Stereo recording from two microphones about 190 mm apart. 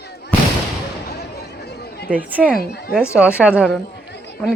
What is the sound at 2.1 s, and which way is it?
A woman's voice, 10° right (ahead or behind).